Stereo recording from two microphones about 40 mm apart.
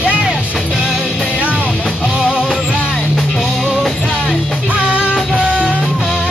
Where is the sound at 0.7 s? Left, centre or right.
Centre.